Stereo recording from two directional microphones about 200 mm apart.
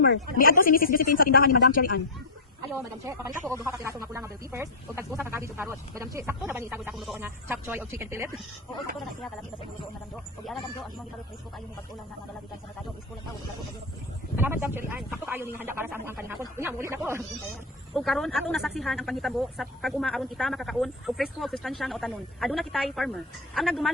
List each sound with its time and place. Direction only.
0.3 s speech: 45° left (ahead or behind)
2.6 s speech: 15° right (ahead or behind); by 7.2 s centre (ahead or behind)
7.2 s speech: 10° right (ahead or behind)
14.3 s speech: 10° right (ahead or behind)
17.9 s speech: centre (ahead or behind)